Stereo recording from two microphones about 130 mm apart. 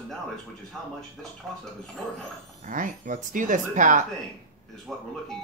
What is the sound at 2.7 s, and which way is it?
Speech, 90° right.